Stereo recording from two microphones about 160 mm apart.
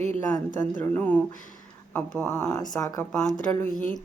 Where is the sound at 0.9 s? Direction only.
10° left (ahead or behind).